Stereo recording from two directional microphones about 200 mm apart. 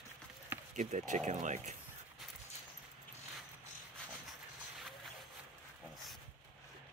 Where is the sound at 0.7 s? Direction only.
40° right (ahead or behind).